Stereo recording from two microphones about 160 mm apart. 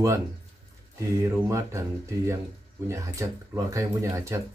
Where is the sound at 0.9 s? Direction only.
20° right (ahead or behind).